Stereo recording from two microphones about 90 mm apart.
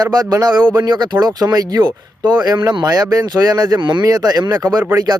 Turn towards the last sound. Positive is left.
turn(degrees=-45)  # may be behind; listen again after turning